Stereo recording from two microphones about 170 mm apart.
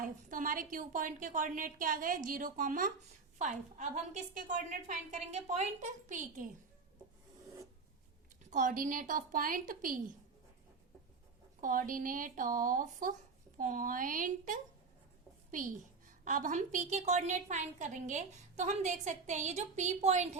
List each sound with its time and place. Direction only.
0.0 s a woman's voice: 50° right (ahead or behind)
8.4 s a woman's voice: 50° right (ahead or behind)
11.6 s a woman's voice: 50° right (ahead or behind)